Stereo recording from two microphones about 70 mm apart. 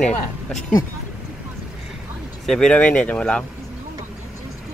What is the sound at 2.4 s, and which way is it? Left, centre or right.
Speech, centre.